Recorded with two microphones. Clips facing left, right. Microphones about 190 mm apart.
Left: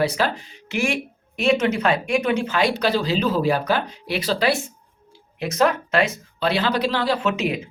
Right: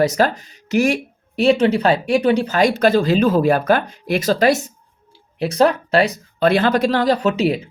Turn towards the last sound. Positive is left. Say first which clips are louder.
# right 5 dB
turn(degrees=-35)  # may be behind; listen again after turning